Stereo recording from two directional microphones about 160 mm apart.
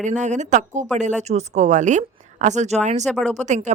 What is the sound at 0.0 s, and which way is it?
Speech, 50° right (ahead or behind).